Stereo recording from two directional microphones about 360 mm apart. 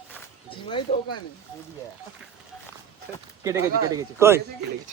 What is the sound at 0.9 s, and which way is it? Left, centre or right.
Speech, centre.